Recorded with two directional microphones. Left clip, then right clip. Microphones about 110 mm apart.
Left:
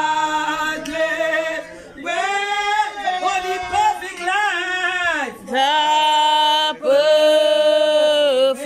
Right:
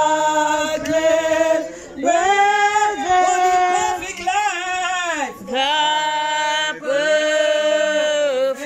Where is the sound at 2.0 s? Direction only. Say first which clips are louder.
Right 6 dB; 90° right.